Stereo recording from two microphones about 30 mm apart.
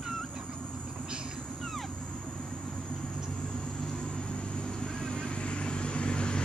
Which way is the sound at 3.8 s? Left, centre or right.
Centre.